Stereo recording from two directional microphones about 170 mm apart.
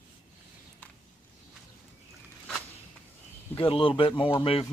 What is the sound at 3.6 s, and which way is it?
Speech, 30° left (ahead or behind).